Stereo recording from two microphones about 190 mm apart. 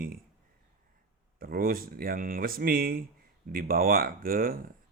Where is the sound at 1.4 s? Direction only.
50° right (ahead or behind).